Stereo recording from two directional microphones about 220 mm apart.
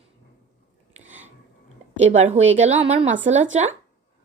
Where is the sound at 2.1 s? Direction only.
30° right (ahead or behind).